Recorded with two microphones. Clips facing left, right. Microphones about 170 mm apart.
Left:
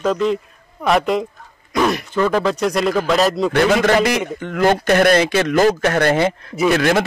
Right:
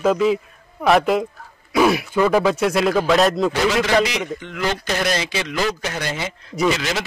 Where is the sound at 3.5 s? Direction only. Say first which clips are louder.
Left 4 dB; 55° left (ahead or behind).